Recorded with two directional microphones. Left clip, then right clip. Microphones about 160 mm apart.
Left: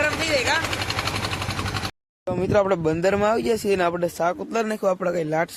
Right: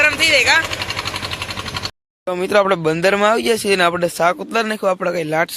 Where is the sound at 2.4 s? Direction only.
10° right (ahead or behind).